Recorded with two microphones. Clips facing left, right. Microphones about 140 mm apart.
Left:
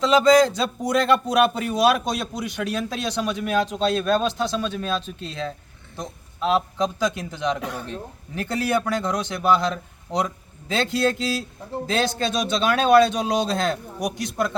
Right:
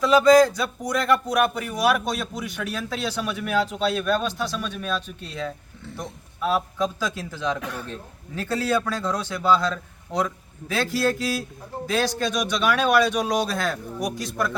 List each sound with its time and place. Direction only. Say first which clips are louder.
0.0 s a man's voice: right 1 dB; 25° left (ahead or behind)